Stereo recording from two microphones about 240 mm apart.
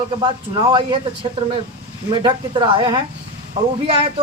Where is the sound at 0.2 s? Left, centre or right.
Centre.